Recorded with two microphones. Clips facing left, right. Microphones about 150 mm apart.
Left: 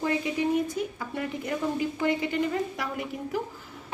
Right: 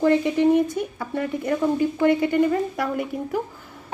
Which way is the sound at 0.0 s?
60° right (ahead or behind).